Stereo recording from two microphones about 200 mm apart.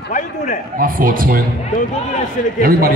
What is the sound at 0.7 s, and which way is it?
Speech, 45° right (ahead or behind).